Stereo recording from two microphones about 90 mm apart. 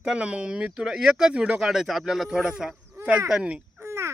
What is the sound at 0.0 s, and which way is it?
Speech, 10° right (ahead or behind).